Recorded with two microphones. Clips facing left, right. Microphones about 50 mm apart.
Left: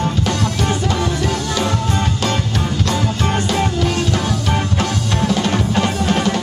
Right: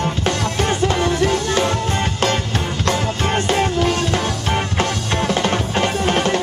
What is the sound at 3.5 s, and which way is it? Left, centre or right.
Music, right.